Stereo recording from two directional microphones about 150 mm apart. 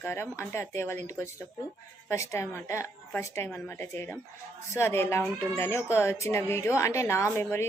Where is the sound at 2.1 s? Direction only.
20° left (ahead or behind).